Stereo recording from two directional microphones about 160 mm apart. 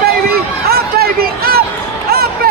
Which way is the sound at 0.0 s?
75° right (ahead or behind).